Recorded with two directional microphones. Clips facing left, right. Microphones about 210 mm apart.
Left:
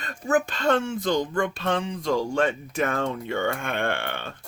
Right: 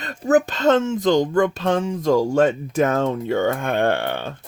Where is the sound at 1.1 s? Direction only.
45° right (ahead or behind).